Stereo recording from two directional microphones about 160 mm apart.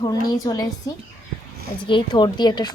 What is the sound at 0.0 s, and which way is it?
A woman's voice, 25° left (ahead or behind).